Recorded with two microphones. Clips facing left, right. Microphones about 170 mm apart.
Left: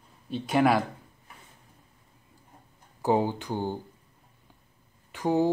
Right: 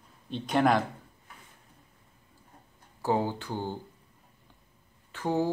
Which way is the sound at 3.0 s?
15° left (ahead or behind).